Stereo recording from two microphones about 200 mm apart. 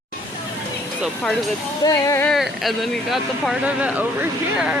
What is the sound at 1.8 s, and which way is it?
Speech, 15° left (ahead or behind).